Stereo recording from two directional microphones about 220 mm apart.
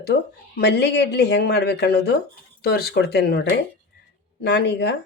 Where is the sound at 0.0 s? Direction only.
50° left (ahead or behind).